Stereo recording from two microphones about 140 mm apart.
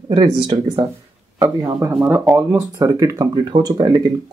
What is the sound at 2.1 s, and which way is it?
Speech, 10° right (ahead or behind).